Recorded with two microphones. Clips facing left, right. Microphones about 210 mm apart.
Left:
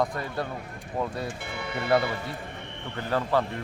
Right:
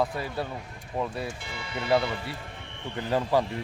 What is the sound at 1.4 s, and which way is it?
Speech, 60° left (ahead or behind).